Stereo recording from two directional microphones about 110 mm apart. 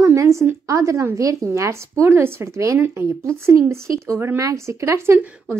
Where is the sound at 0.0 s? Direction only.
25° right (ahead or behind).